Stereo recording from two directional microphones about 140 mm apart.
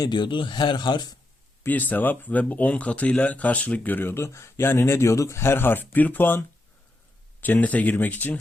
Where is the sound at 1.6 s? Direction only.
10° left (ahead or behind).